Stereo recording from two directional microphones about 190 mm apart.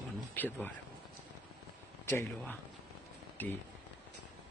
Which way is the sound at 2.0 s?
10° left (ahead or behind).